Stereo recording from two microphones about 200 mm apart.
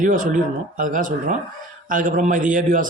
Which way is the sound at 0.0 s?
40° right (ahead or behind).